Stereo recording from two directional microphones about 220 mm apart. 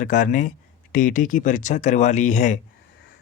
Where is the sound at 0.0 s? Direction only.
35° left (ahead or behind).